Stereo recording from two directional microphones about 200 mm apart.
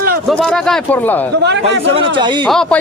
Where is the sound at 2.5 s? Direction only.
5° left (ahead or behind).